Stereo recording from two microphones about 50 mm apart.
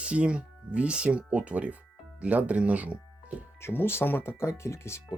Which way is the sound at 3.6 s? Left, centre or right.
Left.